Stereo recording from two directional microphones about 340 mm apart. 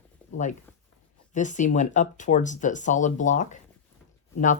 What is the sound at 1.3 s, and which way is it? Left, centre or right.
Speech, left.